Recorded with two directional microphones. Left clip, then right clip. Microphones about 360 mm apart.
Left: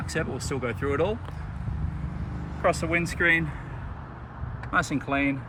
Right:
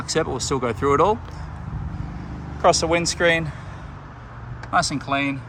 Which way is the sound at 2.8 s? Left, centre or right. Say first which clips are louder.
Right 5 dB; centre.